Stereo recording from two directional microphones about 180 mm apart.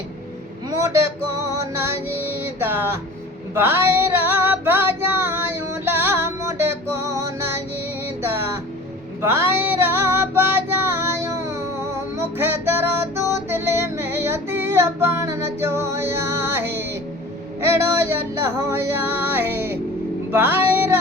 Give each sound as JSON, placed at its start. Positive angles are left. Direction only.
{"t": 0.7, "sound": "vehicle", "side_deg": -15}
{"t": 1.5, "sound": "music", "side_deg": -15}
{"t": 3.5, "sound": "female singing", "side_deg": -10}
{"t": 9.2, "sound": "female singing", "side_deg": -15}
{"t": 17.6, "sound": "music", "side_deg": -15}